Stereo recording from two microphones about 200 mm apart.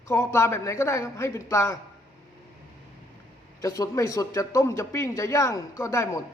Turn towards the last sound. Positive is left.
turn(degrees=15)  # may be behind; listen again after turning